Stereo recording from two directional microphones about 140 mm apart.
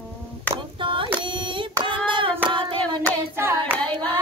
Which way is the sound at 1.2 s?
35° right (ahead or behind).